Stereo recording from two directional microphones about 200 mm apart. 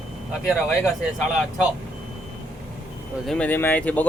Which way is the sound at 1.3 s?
5° right (ahead or behind).